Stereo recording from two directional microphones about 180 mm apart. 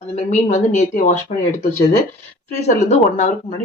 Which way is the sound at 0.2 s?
40° left (ahead or behind).